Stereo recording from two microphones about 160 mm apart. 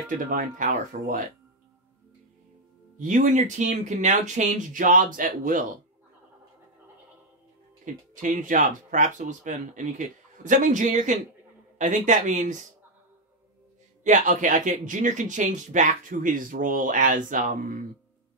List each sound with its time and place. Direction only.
0.3 s speech: 55° right (ahead or behind)
3.0 s speech: 55° right (ahead or behind)
7.8 s speech: 55° right (ahead or behind)
14.0 s speech: 50° right (ahead or behind)